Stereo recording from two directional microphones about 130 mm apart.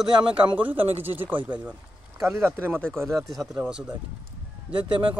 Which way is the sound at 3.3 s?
10° right (ahead or behind).